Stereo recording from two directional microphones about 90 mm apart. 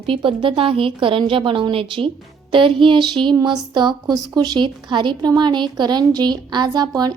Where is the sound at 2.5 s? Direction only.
70° right (ahead or behind).